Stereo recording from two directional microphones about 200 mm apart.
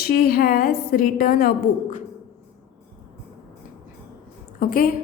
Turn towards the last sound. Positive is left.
turn(degrees=45)  # may be behind; listen again after turning